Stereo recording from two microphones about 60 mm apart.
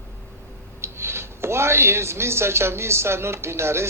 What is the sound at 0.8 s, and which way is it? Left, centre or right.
Speech, right.